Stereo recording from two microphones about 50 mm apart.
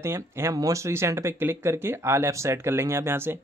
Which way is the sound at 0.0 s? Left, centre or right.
Right.